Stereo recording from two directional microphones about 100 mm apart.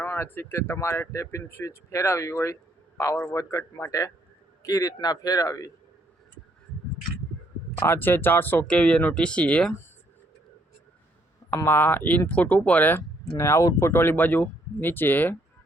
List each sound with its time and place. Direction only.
0.0 s speech: 25° left (ahead or behind)
7.8 s speech: 20° left (ahead or behind)
11.5 s speech: 25° left (ahead or behind)